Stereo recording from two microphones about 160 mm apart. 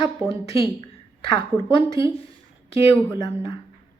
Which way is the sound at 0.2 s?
20° right (ahead or behind).